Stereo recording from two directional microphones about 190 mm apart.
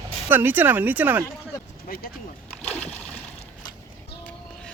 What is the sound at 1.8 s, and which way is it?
Speech, 50° left (ahead or behind).